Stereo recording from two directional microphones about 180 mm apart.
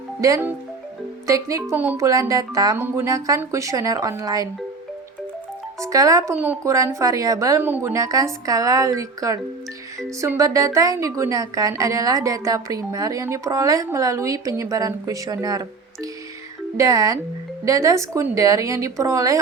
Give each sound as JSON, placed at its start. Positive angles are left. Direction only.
{"t": 0.2, "sound": "a woman's voice", "side_deg": -15}
{"t": 5.8, "sound": "a woman's voice", "side_deg": -20}